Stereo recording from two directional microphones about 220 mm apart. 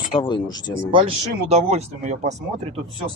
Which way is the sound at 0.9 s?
25° right (ahead or behind).